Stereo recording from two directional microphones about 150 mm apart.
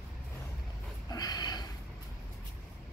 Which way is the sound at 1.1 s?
25° left (ahead or behind).